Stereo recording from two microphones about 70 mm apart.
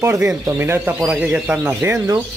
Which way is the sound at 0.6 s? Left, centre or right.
Right.